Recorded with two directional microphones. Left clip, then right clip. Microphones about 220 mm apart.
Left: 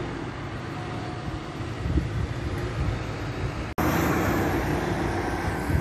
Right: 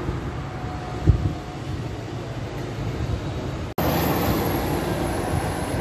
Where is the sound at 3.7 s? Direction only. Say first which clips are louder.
Right 2 dB; 45° right (ahead or behind).